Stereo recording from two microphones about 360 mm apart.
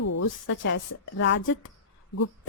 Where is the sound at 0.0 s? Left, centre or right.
Left.